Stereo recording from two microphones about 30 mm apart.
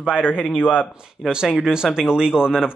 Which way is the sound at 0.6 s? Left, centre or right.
Left.